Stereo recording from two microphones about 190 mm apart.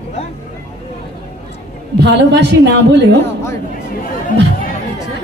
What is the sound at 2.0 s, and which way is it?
A woman's voice, 65° right (ahead or behind).